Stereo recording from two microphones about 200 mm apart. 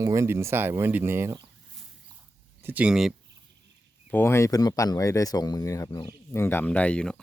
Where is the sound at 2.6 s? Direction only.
10° right (ahead or behind).